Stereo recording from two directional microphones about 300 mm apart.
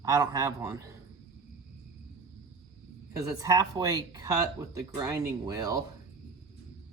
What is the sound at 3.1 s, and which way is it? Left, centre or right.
Speech, centre.